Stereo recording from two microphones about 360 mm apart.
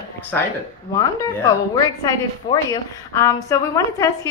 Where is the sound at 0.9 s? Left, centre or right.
Centre.